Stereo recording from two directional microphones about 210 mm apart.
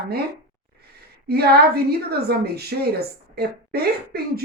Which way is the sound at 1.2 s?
50° right (ahead or behind).